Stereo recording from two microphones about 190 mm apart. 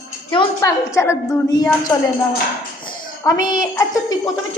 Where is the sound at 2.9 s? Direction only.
20° left (ahead or behind).